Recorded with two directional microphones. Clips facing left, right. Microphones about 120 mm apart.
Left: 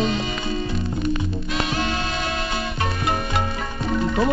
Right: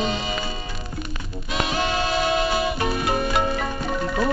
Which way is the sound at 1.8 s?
5° right (ahead or behind).